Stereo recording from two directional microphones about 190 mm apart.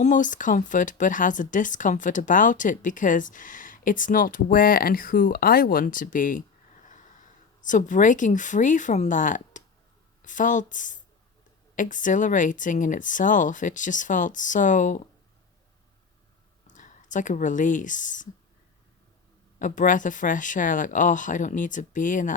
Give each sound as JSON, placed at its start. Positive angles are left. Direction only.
{"t": 0.0, "sound": "speech", "side_deg": 40}
{"t": 7.6, "sound": "speech", "side_deg": 40}
{"t": 16.6, "sound": "speech", "side_deg": 40}
{"t": 19.5, "sound": "speech", "side_deg": 40}